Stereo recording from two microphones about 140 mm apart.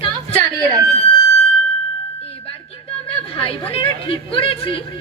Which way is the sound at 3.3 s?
40° left (ahead or behind).